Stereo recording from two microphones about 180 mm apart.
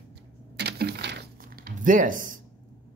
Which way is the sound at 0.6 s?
70° right (ahead or behind).